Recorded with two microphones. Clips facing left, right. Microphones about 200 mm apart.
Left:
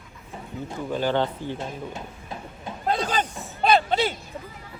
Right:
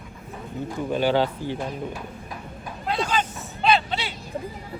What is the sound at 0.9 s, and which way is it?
Speech, 10° right (ahead or behind).